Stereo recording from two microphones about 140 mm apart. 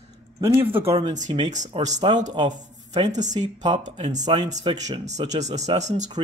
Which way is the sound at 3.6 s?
30° right (ahead or behind).